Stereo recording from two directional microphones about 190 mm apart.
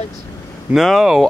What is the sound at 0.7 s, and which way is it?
Speech, centre (ahead or behind).